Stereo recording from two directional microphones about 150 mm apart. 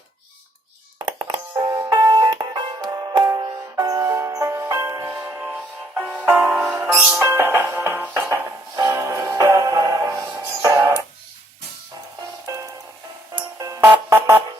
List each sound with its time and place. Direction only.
0.9 s music: 30° right (ahead or behind)
1.5 s music: 20° right (ahead or behind)
12.5 s music: 20° right (ahead or behind)